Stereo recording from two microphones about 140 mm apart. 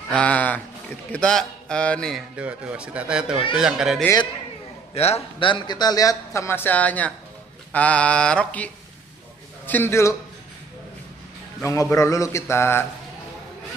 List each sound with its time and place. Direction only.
0.1 s speech: 10° left (ahead or behind)
2.3 s speech: 10° right (ahead or behind)
4.9 s a man's voice: 45° left (ahead or behind); by 10.1 s 20° left (ahead or behind)
11.6 s a man's voice: 20° left (ahead or behind)